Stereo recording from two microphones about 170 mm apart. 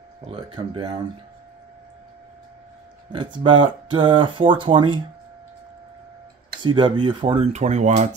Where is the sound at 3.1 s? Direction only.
25° right (ahead or behind).